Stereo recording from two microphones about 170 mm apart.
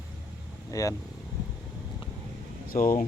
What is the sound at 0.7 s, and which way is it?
Speech, 20° left (ahead or behind).